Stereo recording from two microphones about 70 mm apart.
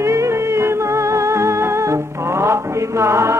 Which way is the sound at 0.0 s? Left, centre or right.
Right.